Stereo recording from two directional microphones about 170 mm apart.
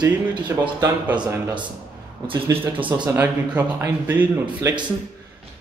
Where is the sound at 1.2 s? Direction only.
20° right (ahead or behind).